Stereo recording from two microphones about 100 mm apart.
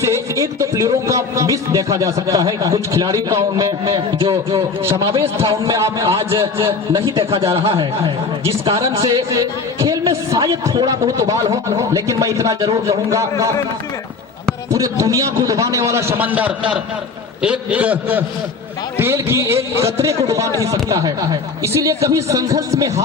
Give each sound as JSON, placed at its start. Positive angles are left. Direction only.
{"t": 0.0, "sound": "speech", "side_deg": -30}
{"t": 4.2, "sound": "a man's voice", "side_deg": -65}
{"t": 4.9, "sound": "a man's voice", "side_deg": -30}
{"t": 6.1, "sound": "a man's voice", "side_deg": -65}
{"t": 8.7, "sound": "speech", "side_deg": -30}
{"t": 14.7, "sound": "a man's voice", "side_deg": -35}
{"t": 18.9, "sound": "a man's voice", "side_deg": -25}